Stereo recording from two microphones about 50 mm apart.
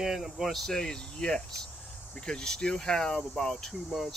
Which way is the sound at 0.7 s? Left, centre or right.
Centre.